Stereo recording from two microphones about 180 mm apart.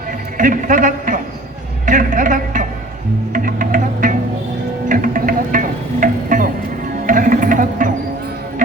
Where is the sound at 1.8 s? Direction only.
45° right (ahead or behind).